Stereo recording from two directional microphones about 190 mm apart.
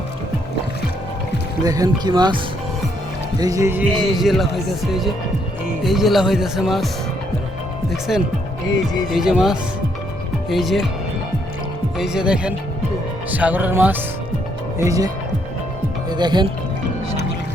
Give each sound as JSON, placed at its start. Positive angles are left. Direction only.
{"t": 1.6, "sound": "speech", "side_deg": -20}
{"t": 4.2, "sound": "speech", "side_deg": 0}
{"t": 8.1, "sound": "speech", "side_deg": 0}
{"t": 11.9, "sound": "speech", "side_deg": -5}